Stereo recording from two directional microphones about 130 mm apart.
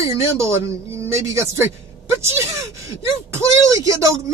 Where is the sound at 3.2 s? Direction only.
25° right (ahead or behind).